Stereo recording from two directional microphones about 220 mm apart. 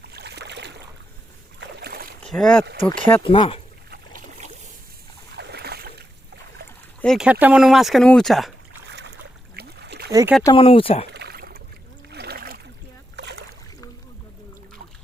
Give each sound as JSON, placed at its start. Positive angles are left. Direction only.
{"t": 0.0, "sound": "boat", "side_deg": -50}
{"t": 2.2, "sound": "speech", "side_deg": 5}
{"t": 3.2, "sound": "speech", "side_deg": 20}
{"t": 3.8, "sound": "a sound", "side_deg": -45}
{"t": 5.4, "sound": "boat", "side_deg": -50}
{"t": 7.0, "sound": "speech", "side_deg": 0}
{"t": 8.9, "sound": "boat", "side_deg": -50}
{"t": 9.6, "sound": "a sound", "side_deg": -50}
{"t": 10.1, "sound": "speech", "side_deg": -15}
{"t": 10.4, "sound": "speech", "side_deg": 25}
{"t": 11.1, "sound": "rowboat", "side_deg": -45}
{"t": 12.1, "sound": "a sound", "side_deg": -45}
{"t": 13.1, "sound": "boat", "side_deg": -50}